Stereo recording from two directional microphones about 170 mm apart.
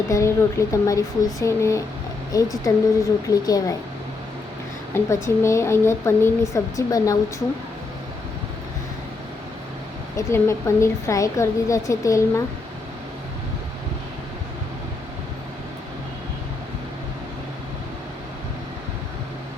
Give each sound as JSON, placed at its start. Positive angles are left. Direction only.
{"t": 0.1, "sound": "a woman's voice", "side_deg": 15}
{"t": 4.9, "sound": "a woman's voice", "side_deg": 15}
{"t": 10.2, "sound": "a woman's voice", "side_deg": 15}